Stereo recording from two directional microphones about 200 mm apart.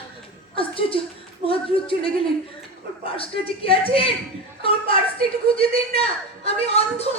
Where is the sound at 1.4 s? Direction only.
25° left (ahead or behind).